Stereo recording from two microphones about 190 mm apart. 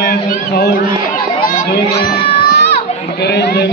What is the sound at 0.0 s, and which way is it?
Chatter, 50° left (ahead or behind).